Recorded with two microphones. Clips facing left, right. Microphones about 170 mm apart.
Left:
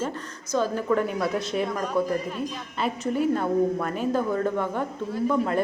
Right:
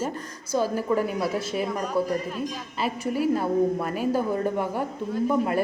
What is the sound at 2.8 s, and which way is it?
A woman's voice, 5° right (ahead or behind).